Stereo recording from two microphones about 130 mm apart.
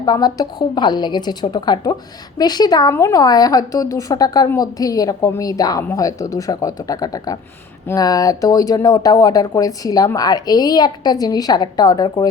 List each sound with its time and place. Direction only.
0.0 s a woman's voice: 30° left (ahead or behind)